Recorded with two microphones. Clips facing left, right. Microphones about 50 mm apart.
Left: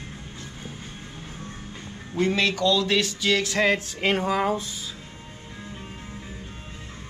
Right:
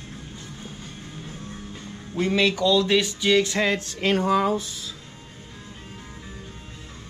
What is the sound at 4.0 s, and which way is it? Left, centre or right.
Speech, left.